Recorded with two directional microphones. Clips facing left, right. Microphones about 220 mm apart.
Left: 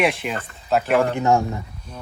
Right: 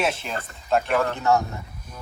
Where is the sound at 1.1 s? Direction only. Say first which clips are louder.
Left 3 dB; 15° left (ahead or behind).